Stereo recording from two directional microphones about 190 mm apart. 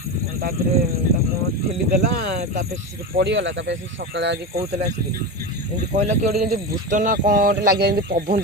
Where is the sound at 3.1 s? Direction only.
65° right (ahead or behind).